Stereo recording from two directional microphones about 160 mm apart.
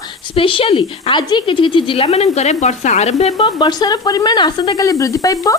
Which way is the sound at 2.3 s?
45° left (ahead or behind).